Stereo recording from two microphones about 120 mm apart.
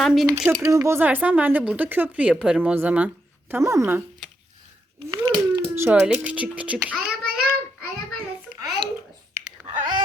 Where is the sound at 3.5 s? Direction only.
25° right (ahead or behind).